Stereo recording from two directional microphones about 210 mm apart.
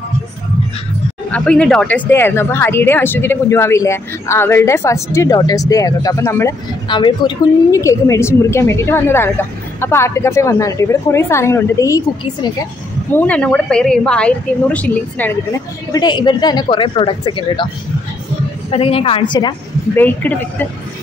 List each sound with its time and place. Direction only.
1.3 s speech: 5° left (ahead or behind)
13.1 s a woman's voice: 5° left (ahead or behind)
15.9 s speech: 20° left (ahead or behind)
18.7 s speech: 25° left (ahead or behind)
20.0 s speech: 10° left (ahead or behind)